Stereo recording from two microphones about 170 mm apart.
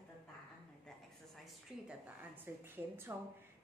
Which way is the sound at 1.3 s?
Centre (ahead or behind).